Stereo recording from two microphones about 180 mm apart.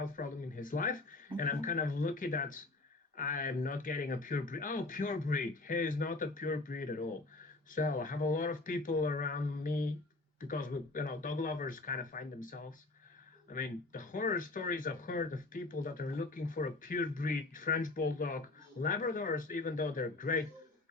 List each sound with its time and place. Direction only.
0.0 s speech: 50° left (ahead or behind)